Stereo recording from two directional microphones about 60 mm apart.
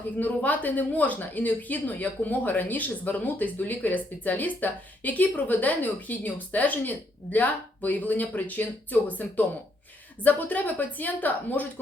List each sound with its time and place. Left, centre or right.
0.2 s speech: left